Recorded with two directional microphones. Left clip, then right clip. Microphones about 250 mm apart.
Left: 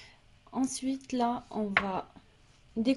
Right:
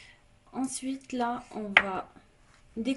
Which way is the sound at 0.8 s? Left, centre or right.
Left.